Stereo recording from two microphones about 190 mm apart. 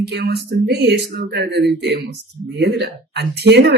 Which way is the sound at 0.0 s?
60° right (ahead or behind).